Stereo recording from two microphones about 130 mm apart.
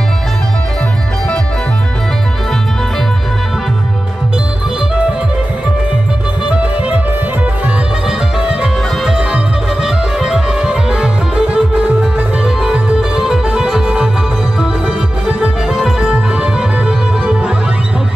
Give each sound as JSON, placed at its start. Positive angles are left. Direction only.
{"t": 8.4, "sound": "music", "side_deg": -5}
{"t": 15.2, "sound": "music", "side_deg": -5}